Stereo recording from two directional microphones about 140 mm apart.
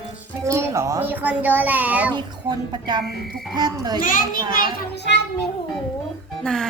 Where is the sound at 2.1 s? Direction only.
30° right (ahead or behind).